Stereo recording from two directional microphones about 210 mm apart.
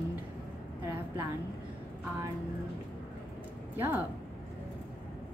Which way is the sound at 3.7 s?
10° right (ahead or behind).